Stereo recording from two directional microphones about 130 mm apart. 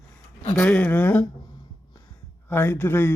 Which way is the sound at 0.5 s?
10° left (ahead or behind).